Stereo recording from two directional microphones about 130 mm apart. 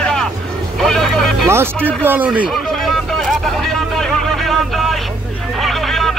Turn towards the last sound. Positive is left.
turn(degrees=0)  # may be behind; listen again after turning